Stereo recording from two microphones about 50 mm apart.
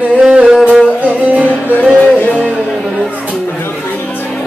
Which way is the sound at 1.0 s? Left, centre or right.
Right.